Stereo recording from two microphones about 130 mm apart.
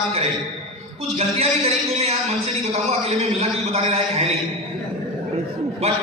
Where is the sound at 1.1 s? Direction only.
55° right (ahead or behind).